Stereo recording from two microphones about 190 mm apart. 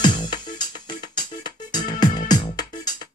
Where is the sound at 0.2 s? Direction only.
20° left (ahead or behind).